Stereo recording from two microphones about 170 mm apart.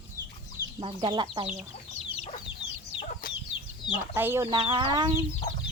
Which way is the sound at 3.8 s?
15° right (ahead or behind).